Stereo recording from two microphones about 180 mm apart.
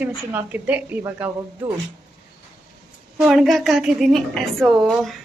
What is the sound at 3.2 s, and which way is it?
A woman's voice, centre (ahead or behind).